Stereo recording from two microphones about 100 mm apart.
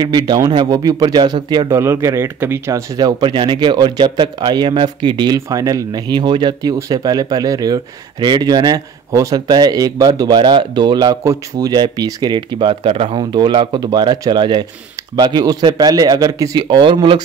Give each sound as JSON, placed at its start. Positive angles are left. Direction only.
{"t": 0.0, "sound": "speech", "side_deg": -45}
{"t": 1.7, "sound": "speech", "side_deg": -25}
{"t": 6.6, "sound": "speech", "side_deg": -40}
{"t": 13.2, "sound": "speech", "side_deg": -50}
{"t": 16.6, "sound": "speech", "side_deg": -55}